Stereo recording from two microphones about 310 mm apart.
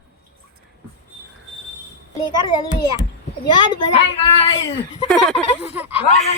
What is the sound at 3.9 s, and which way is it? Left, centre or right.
Speech, centre.